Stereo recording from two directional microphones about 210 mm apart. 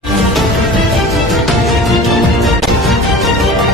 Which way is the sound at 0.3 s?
Centre (ahead or behind).